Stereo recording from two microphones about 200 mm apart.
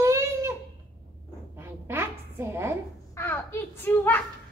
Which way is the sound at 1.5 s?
10° right (ahead or behind).